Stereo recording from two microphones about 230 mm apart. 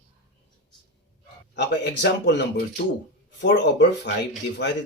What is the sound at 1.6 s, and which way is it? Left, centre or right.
A man's voice, left.